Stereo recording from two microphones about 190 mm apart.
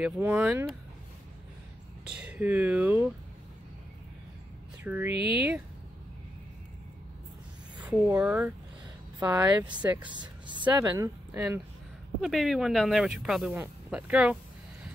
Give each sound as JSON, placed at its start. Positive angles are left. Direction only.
{"t": 0.0, "sound": "speech", "side_deg": -5}
{"t": 2.0, "sound": "a sound", "side_deg": -5}
{"t": 2.3, "sound": "speech", "side_deg": -10}
{"t": 4.8, "sound": "speech", "side_deg": -10}
{"t": 7.8, "sound": "a sound", "side_deg": -5}
{"t": 8.2, "sound": "speech", "side_deg": -10}
{"t": 10.1, "sound": "speech", "side_deg": -25}
{"t": 11.3, "sound": "speech", "side_deg": -5}